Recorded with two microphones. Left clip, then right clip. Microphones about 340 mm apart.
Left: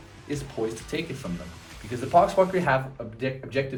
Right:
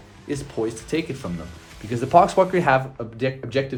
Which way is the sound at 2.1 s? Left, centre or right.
Right.